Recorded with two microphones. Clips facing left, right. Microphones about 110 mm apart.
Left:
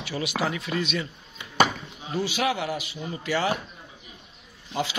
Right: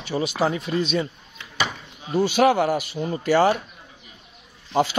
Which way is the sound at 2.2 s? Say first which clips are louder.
Right 9 dB; 45° right (ahead or behind).